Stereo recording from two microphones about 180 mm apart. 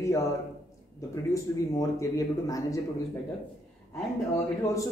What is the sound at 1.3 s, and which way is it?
Speech, 15° left (ahead or behind).